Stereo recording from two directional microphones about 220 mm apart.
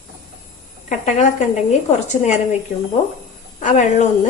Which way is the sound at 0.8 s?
35° left (ahead or behind).